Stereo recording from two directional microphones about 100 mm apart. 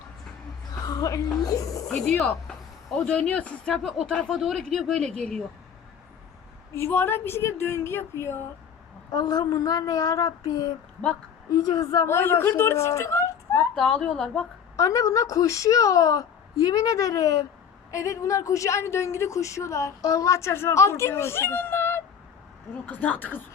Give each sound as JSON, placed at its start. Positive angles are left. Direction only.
{"t": 0.8, "sound": "a woman's voice", "side_deg": 40}
{"t": 1.9, "sound": "speech", "side_deg": 5}
{"t": 6.7, "sound": "speech", "side_deg": 25}
{"t": 9.1, "sound": "a woman's voice", "side_deg": 40}
{"t": 12.0, "sound": "speech", "side_deg": 25}
{"t": 13.7, "sound": "speech", "side_deg": 5}
{"t": 14.8, "sound": "a woman's voice", "side_deg": 35}